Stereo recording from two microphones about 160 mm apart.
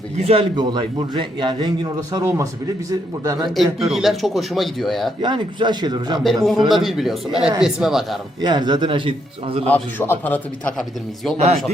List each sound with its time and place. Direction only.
0.3 s a man's voice: 30° right (ahead or behind)
3.5 s speech: centre (ahead or behind)
5.2 s a man's voice: 30° right (ahead or behind)
6.1 s speech: centre (ahead or behind)
8.4 s a man's voice: 25° right (ahead or behind)
9.6 s a man's voice: 10° left (ahead or behind)
11.3 s speech: 40° right (ahead or behind)